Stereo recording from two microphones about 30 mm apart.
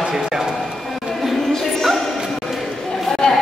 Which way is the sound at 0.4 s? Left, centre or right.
Centre.